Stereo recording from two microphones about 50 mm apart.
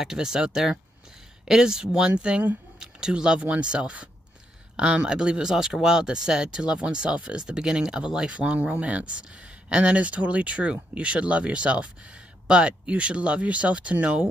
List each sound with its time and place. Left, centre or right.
0.0 s speech: centre; by 14.3 s right